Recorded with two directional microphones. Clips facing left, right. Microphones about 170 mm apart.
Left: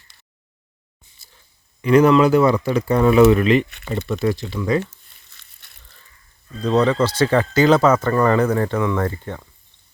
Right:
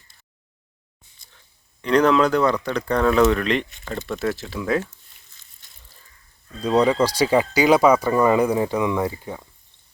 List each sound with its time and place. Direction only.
1.8 s speech: 5° left (ahead or behind)
4.8 s crumpling: 70° left (ahead or behind)
6.6 s speech: 10° right (ahead or behind)